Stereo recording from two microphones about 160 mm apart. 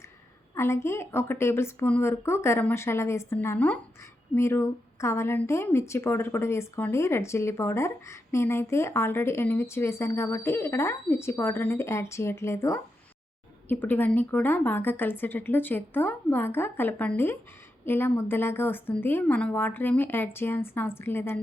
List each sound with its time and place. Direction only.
0.5 s speech: 15° left (ahead or behind)